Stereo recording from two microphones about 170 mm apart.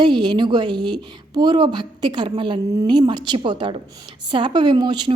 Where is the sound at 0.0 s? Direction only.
25° right (ahead or behind).